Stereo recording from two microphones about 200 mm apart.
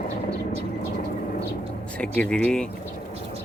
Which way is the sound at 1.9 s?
5° left (ahead or behind).